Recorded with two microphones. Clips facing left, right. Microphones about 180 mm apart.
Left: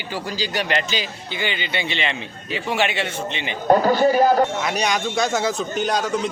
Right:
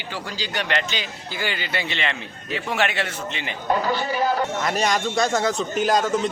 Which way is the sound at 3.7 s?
45° left (ahead or behind).